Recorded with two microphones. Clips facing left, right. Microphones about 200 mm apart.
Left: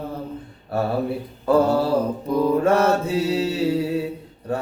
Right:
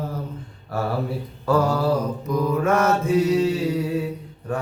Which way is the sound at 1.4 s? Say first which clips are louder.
Left 3 dB; 25° left (ahead or behind).